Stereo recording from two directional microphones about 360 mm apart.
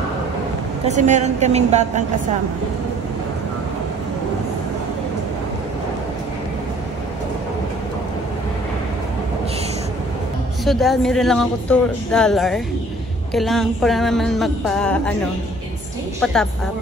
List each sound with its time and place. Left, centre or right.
0.8 s a woman's voice: centre
10.6 s speech: centre